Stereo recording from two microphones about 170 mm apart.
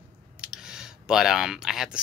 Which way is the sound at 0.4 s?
5° right (ahead or behind).